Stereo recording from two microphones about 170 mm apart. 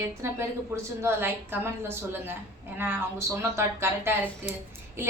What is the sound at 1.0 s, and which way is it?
A woman's voice, 15° right (ahead or behind).